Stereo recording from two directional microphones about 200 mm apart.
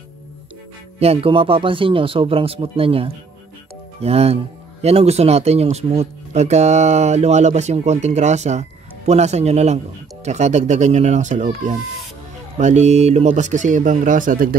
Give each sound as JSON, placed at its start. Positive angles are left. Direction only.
{"t": 0.9, "sound": "speech", "side_deg": -30}